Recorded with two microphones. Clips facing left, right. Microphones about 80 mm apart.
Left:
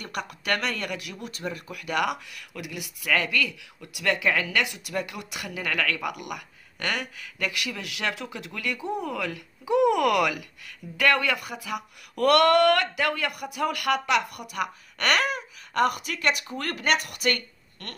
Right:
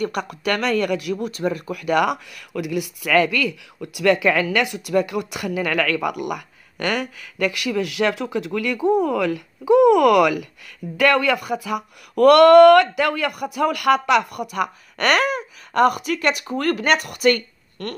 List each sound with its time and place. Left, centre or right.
0.0 s a woman's voice: right
1.2 s a woman's voice: right
4.0 s a woman's voice: right
11.0 s a woman's voice: right
14.5 s a woman's voice: right
16.8 s a woman's voice: right